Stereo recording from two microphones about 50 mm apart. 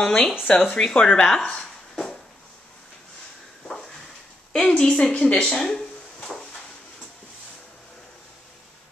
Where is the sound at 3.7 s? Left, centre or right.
Centre.